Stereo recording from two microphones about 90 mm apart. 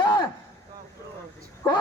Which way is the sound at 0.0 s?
60° left (ahead or behind).